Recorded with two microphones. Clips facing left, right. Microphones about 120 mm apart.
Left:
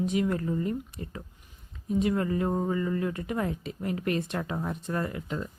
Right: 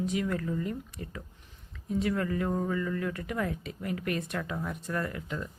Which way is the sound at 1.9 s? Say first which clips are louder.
Left 3 dB; 20° left (ahead or behind).